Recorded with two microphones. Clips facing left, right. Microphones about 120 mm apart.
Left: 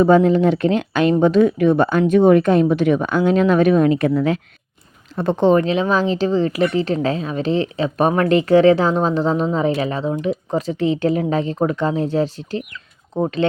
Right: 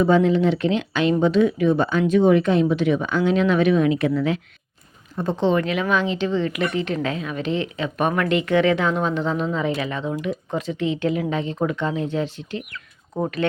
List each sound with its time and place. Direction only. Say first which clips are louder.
0.0 s speech: left 4 dB; 45° left (ahead or behind)
5.1 s speech: left 5 dB; 65° left (ahead or behind)
5.4 s speech: left 6 dB; 45° left (ahead or behind)
5.6 s speech: left 4 dB; 30° left (ahead or behind)
13.1 s speech: left 4 dB; 20° left (ahead or behind)